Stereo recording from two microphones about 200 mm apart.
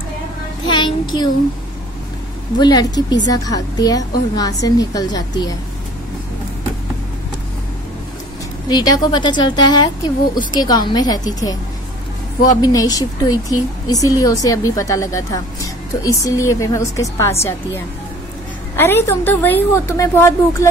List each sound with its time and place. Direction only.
0.7 s a woman's voice: 20° left (ahead or behind)
2.6 s a woman's voice: 20° left (ahead or behind)
8.6 s a woman's voice: 20° left (ahead or behind)
12.6 s a woman's voice: 20° left (ahead or behind)
18.8 s a woman's voice: 10° left (ahead or behind)